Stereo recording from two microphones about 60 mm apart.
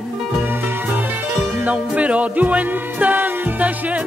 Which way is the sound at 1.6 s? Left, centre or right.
Right.